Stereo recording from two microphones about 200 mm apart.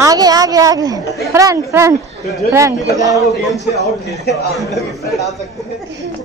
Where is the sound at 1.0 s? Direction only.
15° left (ahead or behind).